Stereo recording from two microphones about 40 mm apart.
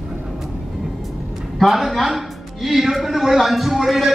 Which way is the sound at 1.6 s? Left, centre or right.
Centre.